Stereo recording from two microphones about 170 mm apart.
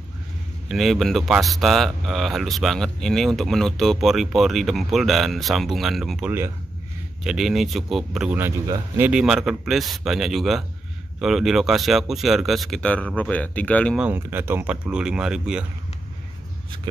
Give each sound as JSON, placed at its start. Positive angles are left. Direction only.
{"t": 0.7, "sound": "speech", "side_deg": 0}
{"t": 13.9, "sound": "speech", "side_deg": -10}